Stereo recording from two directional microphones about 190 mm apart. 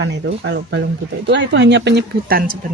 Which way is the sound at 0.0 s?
70° right (ahead or behind).